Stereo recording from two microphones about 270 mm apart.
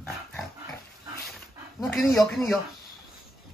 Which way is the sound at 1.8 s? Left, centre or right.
Centre.